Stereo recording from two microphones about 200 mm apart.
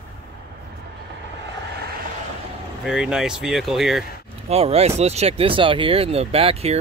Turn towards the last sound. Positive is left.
turn(degrees=-30)  # may be behind; listen again after turning